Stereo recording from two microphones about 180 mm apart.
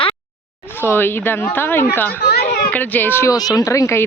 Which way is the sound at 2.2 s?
60° left (ahead or behind).